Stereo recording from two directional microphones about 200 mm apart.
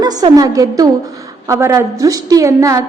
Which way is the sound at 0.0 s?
20° right (ahead or behind).